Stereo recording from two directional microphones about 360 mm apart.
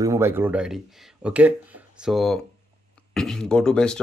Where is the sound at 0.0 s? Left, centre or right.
Centre.